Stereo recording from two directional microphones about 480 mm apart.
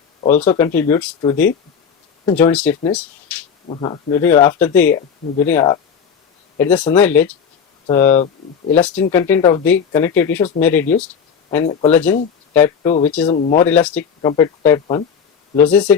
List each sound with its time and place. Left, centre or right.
0.3 s speech: centre